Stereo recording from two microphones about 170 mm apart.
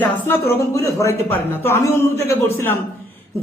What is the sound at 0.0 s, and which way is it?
A man's voice, 10° left (ahead or behind).